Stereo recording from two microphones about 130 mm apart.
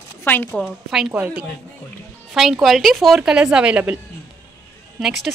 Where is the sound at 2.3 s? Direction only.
Centre (ahead or behind).